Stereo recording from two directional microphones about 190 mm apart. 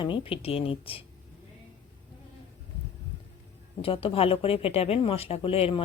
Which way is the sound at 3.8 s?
30° left (ahead or behind).